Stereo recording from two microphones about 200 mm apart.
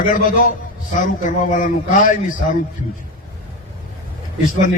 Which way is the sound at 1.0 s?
40° left (ahead or behind).